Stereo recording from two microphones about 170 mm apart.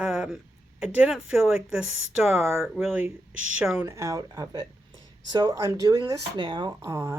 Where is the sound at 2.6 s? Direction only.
Centre (ahead or behind).